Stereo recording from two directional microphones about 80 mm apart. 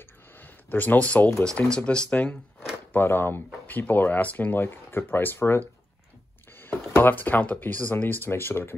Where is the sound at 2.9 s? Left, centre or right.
Left.